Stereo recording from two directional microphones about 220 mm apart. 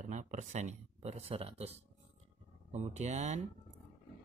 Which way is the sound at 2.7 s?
30° right (ahead or behind).